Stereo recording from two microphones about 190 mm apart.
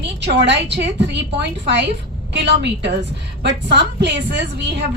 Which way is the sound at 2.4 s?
65° right (ahead or behind).